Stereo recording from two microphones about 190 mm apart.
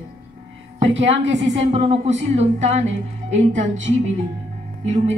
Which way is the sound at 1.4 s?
35° right (ahead or behind).